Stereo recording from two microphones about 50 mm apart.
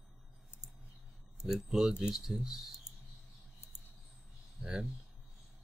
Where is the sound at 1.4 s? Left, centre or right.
Centre.